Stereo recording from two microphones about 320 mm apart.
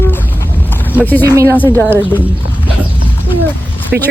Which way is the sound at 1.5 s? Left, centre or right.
Centre.